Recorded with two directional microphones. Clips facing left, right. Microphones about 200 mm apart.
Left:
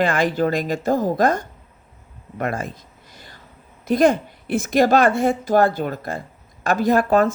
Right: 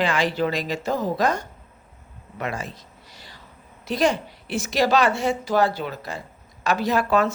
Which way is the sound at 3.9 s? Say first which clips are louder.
Left 6 dB; 55° left (ahead or behind).